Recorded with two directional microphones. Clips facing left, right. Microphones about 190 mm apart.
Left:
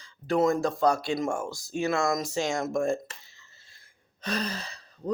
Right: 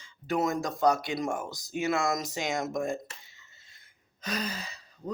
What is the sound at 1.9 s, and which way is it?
Speech, 25° right (ahead or behind).